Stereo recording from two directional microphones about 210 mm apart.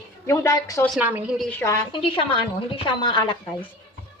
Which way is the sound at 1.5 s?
10° left (ahead or behind).